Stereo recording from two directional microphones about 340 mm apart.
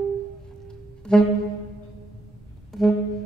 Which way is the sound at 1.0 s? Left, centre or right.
Centre.